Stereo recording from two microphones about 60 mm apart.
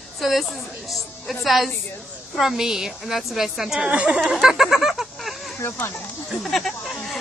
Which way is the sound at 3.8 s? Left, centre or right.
Centre.